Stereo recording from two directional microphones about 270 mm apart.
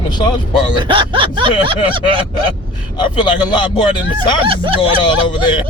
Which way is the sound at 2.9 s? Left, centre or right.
Centre.